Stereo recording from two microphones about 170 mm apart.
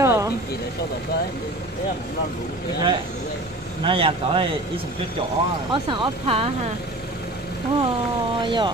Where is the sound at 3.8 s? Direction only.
30° right (ahead or behind).